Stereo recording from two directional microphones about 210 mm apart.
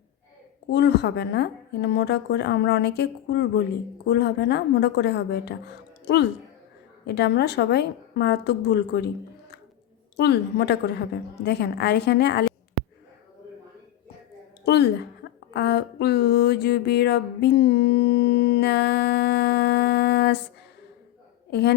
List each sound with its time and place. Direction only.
0.7 s a woman's voice: 55° left (ahead or behind)
10.2 s a woman's voice: 50° left (ahead or behind)
14.6 s a woman's voice: 50° left (ahead or behind)
21.5 s a woman's voice: 50° left (ahead or behind)